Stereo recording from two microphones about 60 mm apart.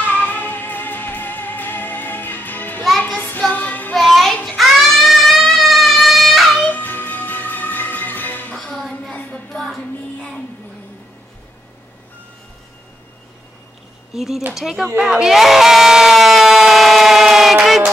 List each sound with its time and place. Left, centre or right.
0.1 s music: left
3.2 s child singing: left
3.9 s music: centre
6.5 s music: left
9.1 s a sound: left
14.1 s a sound: centre
14.5 s speech: centre
15.0 s crowd: centre